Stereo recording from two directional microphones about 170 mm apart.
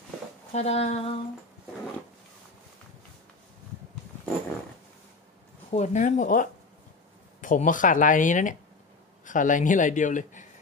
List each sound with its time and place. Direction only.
0.5 s speech: 40° left (ahead or behind)
5.7 s a man's voice: 45° left (ahead or behind)